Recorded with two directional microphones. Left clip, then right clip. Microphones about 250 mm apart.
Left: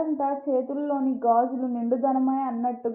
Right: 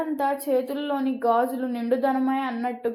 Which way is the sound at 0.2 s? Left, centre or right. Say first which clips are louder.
Right 2 dB; right.